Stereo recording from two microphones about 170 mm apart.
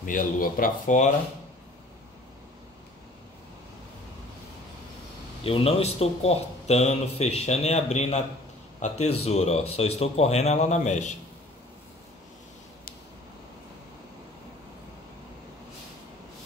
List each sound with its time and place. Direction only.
0.0 s speech: 55° left (ahead or behind)
5.4 s a man's voice: 35° left (ahead or behind)